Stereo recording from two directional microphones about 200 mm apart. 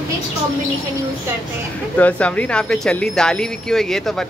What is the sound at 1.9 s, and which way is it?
Speech, 5° left (ahead or behind).